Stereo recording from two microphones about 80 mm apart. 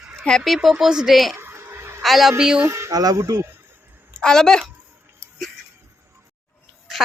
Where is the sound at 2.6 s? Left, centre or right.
Right.